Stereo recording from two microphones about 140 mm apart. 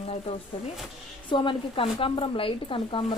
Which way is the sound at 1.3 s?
35° left (ahead or behind).